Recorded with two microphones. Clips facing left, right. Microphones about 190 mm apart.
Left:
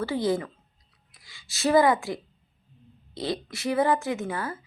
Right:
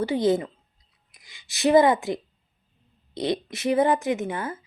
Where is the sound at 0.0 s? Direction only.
20° right (ahead or behind).